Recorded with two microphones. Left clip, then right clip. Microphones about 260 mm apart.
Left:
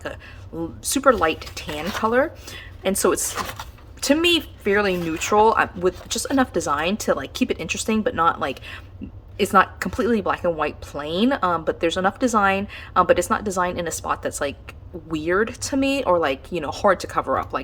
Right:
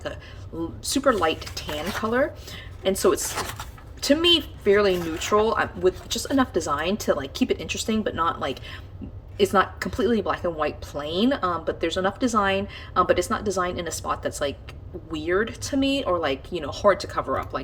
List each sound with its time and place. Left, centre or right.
0.9 s speech: centre